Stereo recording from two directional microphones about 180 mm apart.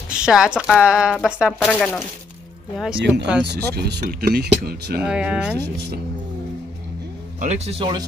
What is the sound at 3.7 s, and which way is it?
Speech, 55° right (ahead or behind).